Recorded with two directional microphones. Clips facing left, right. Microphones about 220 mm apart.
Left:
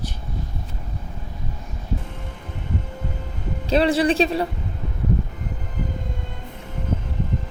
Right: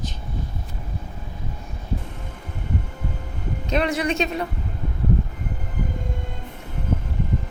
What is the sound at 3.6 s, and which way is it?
Speech, 30° left (ahead or behind).